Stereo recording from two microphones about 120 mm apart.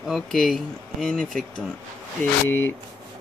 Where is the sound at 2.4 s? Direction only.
20° left (ahead or behind).